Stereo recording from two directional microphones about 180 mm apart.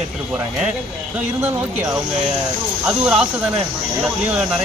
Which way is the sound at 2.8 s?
5° right (ahead or behind).